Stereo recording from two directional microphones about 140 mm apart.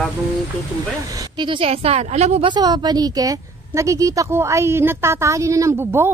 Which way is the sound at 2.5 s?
30° right (ahead or behind).